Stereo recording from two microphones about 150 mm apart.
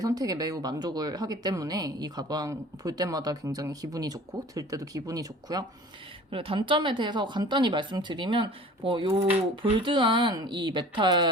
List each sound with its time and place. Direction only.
0.0 s speech: 25° right (ahead or behind)
6.3 s speech: 35° right (ahead or behind)